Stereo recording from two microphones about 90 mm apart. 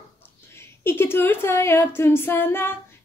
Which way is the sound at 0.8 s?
25° left (ahead or behind).